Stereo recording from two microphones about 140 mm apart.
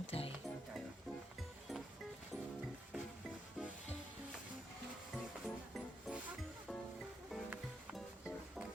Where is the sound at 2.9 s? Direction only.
10° right (ahead or behind).